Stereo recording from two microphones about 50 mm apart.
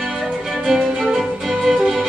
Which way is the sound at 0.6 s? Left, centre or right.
Centre.